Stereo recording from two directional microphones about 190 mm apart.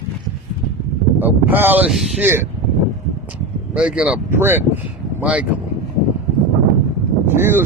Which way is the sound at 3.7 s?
5° right (ahead or behind).